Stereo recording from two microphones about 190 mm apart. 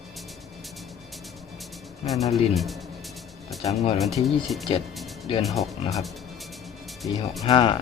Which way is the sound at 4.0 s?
Centre (ahead or behind).